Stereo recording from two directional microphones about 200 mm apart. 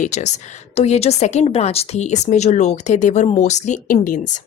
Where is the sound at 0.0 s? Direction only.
35° left (ahead or behind).